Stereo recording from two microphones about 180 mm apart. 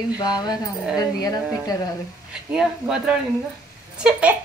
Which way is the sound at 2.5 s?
5° right (ahead or behind).